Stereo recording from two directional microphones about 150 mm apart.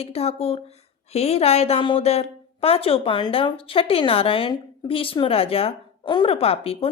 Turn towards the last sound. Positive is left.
turn(degrees=40)  # may be behind; listen again after turning